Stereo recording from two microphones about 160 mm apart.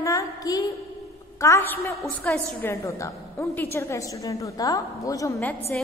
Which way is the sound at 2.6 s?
15° left (ahead or behind).